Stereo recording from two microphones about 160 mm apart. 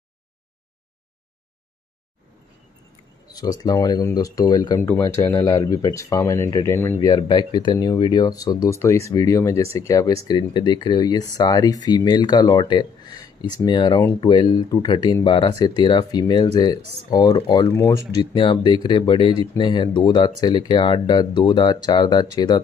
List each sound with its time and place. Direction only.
3.3 s speech: 25° left (ahead or behind)